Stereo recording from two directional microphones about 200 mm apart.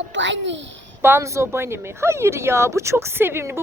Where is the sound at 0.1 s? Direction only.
65° right (ahead or behind).